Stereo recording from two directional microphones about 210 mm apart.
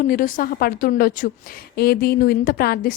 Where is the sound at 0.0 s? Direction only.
40° left (ahead or behind).